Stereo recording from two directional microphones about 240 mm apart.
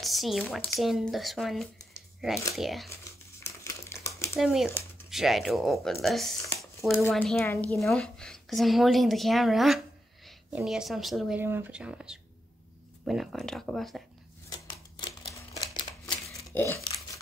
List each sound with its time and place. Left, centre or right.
0.0 s a woman's voice: centre
3.0 s crumpling: centre
4.4 s a woman's voice: centre
4.6 s a sound: centre
5.1 s a woman's voice: centre
15.0 s crumpling: centre